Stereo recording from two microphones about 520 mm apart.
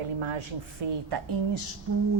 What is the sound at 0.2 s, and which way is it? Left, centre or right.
A woman's voice, right.